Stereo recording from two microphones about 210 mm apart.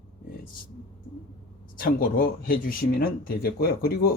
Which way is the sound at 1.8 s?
45° left (ahead or behind).